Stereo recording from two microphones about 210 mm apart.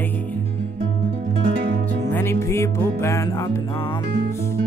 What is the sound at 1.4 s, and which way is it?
Music, 45° right (ahead or behind).